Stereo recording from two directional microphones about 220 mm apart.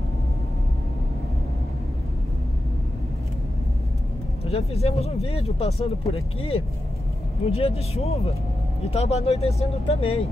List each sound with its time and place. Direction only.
4.5 s speech: 30° left (ahead or behind)